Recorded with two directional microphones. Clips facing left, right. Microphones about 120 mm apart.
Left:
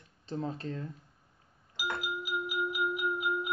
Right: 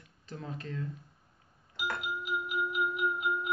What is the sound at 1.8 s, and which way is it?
Music, 5° left (ahead or behind).